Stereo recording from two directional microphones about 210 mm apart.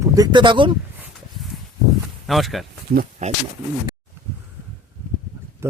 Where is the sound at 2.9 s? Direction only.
40° right (ahead or behind).